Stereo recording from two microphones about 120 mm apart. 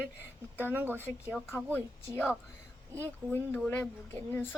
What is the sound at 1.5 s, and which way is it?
Speech, 20° left (ahead or behind).